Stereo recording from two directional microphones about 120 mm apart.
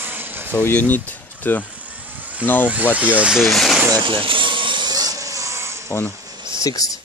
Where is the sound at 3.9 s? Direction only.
45° right (ahead or behind); by 5.8 s 25° right (ahead or behind).